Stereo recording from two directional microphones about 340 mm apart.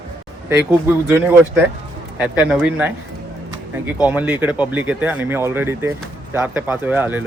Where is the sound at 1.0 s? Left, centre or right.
Centre.